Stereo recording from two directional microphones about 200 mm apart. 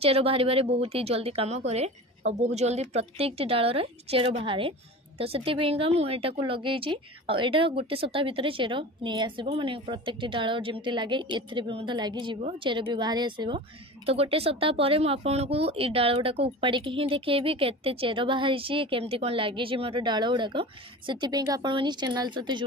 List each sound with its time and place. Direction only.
0.0 s a woman's voice: 30° right (ahead or behind)